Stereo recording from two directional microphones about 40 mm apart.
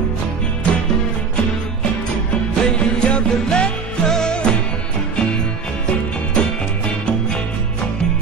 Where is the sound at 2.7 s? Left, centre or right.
Left.